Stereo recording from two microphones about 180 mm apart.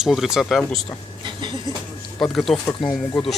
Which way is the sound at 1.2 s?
25° right (ahead or behind).